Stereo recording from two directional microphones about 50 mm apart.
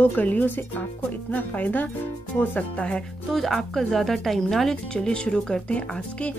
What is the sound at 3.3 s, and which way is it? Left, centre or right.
Speech, centre.